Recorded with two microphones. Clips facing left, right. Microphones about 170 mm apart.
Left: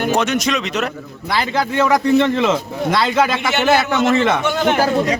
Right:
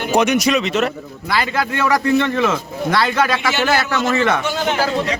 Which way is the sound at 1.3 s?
20° left (ahead or behind).